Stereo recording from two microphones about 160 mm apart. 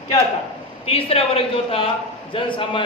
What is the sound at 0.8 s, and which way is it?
A woman's voice, 40° left (ahead or behind).